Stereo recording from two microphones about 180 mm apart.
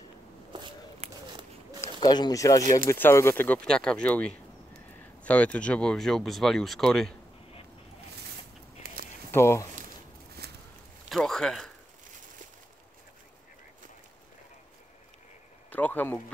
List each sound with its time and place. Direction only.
0.5 s walk: 25° right (ahead or behind)
1.8 s speech: 25° left (ahead or behind); by 7.1 s centre (ahead or behind)
8.8 s a sound: 55° right (ahead or behind)
9.3 s speech: 15° left (ahead or behind)
10.4 s a sound: 60° right (ahead or behind)
11.1 s speech: centre (ahead or behind)
15.7 s speech: 10° left (ahead or behind)